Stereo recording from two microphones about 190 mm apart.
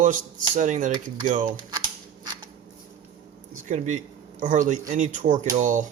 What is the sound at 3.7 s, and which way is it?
Speech, 40° right (ahead or behind).